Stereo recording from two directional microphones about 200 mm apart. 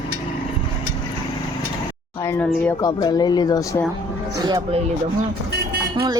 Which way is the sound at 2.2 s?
10° left (ahead or behind).